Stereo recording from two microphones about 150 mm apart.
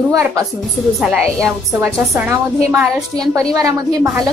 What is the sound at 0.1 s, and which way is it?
Speech, 20° right (ahead or behind).